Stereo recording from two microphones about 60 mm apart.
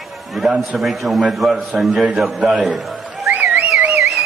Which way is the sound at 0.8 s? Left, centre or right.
Centre.